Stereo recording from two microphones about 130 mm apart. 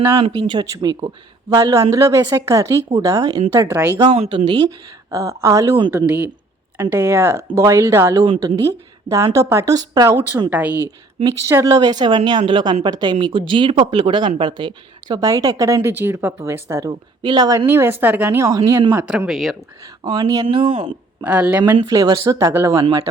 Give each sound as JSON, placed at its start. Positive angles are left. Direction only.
{"t": 0.2, "sound": "speech", "side_deg": -35}
{"t": 4.3, "sound": "speech", "side_deg": -40}
{"t": 5.1, "sound": "speech", "side_deg": -25}
{"t": 5.9, "sound": "a woman's voice", "side_deg": -10}
{"t": 11.3, "sound": "speech", "side_deg": -25}
{"t": 17.2, "sound": "speech", "side_deg": -35}
{"t": 17.7, "sound": "a woman's voice", "side_deg": -15}
{"t": 18.9, "sound": "a woman's voice", "side_deg": -10}
{"t": 20.1, "sound": "speech", "side_deg": -30}
{"t": 21.2, "sound": "a woman's voice", "side_deg": -15}
{"t": 21.8, "sound": "speech", "side_deg": -30}